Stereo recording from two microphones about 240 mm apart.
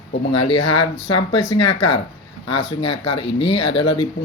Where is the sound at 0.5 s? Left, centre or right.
Left.